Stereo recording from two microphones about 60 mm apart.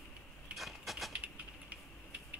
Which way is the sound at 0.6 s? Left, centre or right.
Centre.